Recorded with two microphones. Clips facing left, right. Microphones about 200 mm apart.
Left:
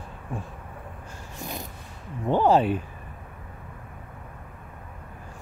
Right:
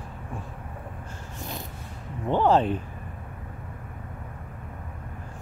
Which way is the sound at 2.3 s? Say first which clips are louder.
Left 1 dB; 10° left (ahead or behind).